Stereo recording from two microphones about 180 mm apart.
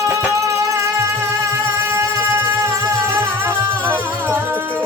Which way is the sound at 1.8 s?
15° right (ahead or behind).